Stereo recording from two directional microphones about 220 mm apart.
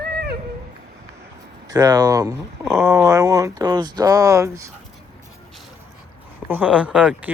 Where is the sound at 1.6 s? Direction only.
15° right (ahead or behind).